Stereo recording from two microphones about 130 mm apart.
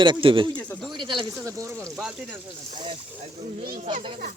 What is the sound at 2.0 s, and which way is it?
Speech, 5° right (ahead or behind).